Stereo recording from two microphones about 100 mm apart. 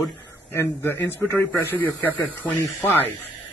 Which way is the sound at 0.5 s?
20° left (ahead or behind).